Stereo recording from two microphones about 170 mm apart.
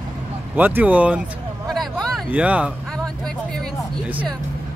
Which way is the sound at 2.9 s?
5° left (ahead or behind).